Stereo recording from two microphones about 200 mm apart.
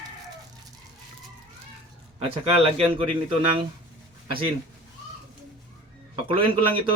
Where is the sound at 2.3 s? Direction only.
30° right (ahead or behind).